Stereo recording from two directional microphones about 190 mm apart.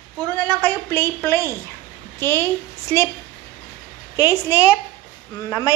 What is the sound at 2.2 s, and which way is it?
Speech, 15° left (ahead or behind).